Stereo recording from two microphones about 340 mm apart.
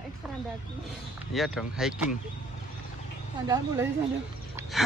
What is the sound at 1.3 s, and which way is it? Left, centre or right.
Speech, centre.